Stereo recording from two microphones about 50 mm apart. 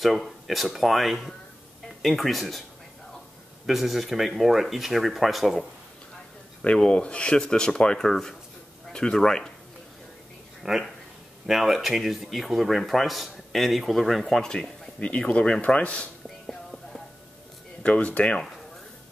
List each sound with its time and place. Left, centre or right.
0.0 s speech: centre
3.6 s speech: centre
6.8 s speech: centre
10.6 s speech: centre
15.0 s speech: left
16.4 s music: centre
17.8 s speech: left